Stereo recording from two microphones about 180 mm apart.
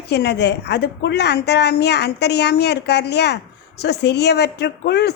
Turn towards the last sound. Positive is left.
turn(degrees=65)  # may be behind; listen again after turning